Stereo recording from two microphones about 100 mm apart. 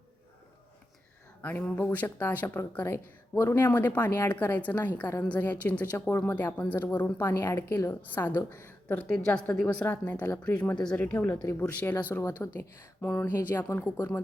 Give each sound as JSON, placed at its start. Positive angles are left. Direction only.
{"t": 1.4, "sound": "a woman's voice", "side_deg": 15}